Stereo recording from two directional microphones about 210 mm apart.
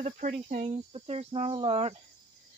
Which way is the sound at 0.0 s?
35° right (ahead or behind).